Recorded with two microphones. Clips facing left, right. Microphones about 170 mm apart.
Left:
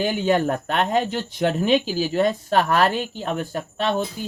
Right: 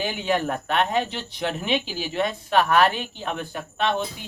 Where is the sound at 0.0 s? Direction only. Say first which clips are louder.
Left 5 dB; 40° left (ahead or behind).